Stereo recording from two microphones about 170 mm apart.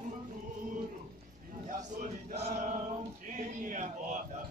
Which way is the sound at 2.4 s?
45° right (ahead or behind).